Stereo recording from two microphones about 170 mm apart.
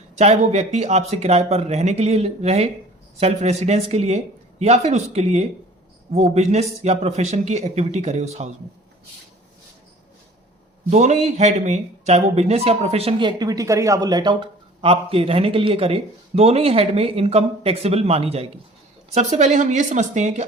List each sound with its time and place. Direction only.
0.2 s speech: 40° right (ahead or behind)
10.8 s speech: 40° right (ahead or behind)